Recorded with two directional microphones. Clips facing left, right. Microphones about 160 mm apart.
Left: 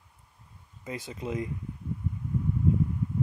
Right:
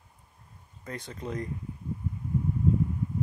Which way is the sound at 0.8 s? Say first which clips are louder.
Left 2 dB; 5° left (ahead or behind).